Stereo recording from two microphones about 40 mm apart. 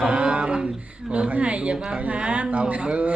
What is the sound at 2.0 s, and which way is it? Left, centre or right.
Speech, right.